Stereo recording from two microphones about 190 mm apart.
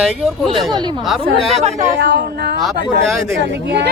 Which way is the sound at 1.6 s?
35° right (ahead or behind).